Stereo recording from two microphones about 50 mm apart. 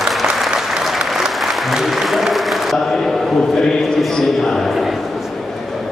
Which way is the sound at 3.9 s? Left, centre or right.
Centre.